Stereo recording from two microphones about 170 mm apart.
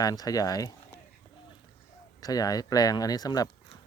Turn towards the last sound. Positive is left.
turn(degrees=20)  # may be behind; listen again after turning